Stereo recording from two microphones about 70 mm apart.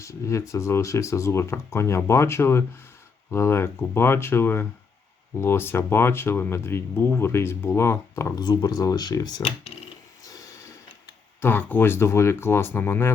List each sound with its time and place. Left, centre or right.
0.0 s speech: left
8.4 s speech: left
11.3 s speech: left